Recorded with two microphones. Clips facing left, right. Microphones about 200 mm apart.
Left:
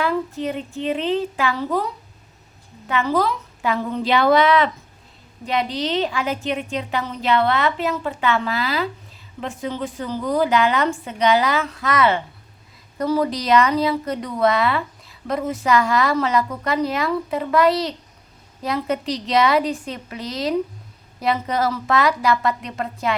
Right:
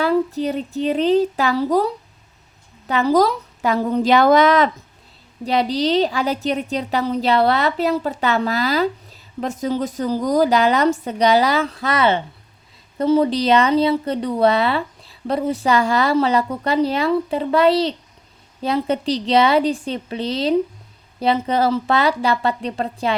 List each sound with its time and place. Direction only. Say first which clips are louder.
0.0 s a woman's voice: right 4 dB; 35° right (ahead or behind)